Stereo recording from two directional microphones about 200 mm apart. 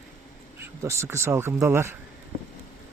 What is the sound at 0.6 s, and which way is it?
Speech, 15° right (ahead or behind).